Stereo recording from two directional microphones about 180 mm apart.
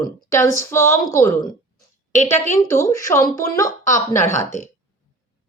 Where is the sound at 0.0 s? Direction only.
15° left (ahead or behind).